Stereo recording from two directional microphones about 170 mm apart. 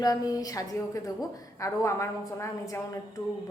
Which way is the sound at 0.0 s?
20° left (ahead or behind).